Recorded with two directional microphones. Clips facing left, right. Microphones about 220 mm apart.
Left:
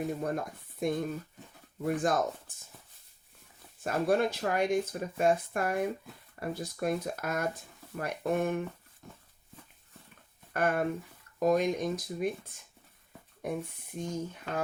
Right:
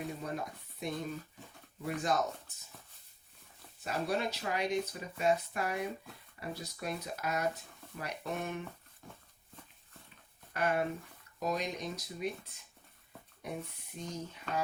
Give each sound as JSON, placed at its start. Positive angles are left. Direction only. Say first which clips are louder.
{"t": 0.2, "sound": "speech", "louder": "left 6 dB", "side_deg": 50}
{"t": 3.8, "sound": "speech", "louder": "left 7 dB", "side_deg": 50}
{"t": 10.5, "sound": "speech", "louder": "left 3 dB", "side_deg": 50}
{"t": 13.4, "sound": "speech", "louder": "left 6 dB", "side_deg": 50}